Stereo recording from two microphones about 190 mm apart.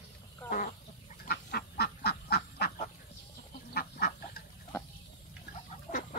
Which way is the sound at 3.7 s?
55° left (ahead or behind).